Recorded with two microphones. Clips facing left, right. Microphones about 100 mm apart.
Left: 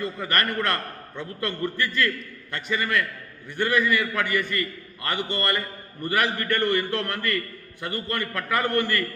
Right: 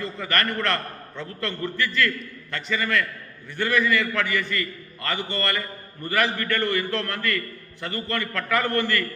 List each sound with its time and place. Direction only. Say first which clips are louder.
0.0 s a man's voice: even; 15° left (ahead or behind)